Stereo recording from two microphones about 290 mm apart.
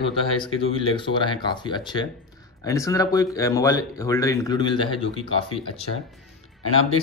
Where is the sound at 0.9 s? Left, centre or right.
Centre.